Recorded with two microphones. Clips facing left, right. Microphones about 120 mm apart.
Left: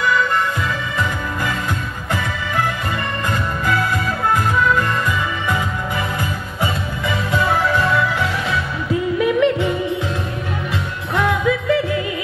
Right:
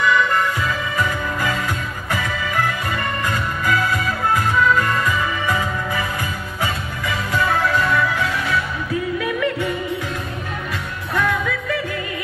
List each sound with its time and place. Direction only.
6.6 s music: 25° left (ahead or behind)
9.2 s yodeling: 25° left (ahead or behind)
11.1 s music: 25° left (ahead or behind)